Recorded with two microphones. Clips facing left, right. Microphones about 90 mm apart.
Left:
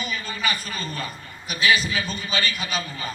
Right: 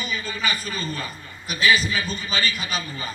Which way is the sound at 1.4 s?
45° right (ahead or behind).